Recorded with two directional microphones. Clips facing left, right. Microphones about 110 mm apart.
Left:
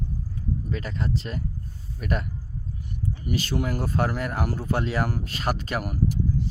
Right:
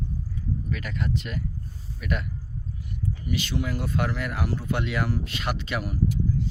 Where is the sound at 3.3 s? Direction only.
40° left (ahead or behind).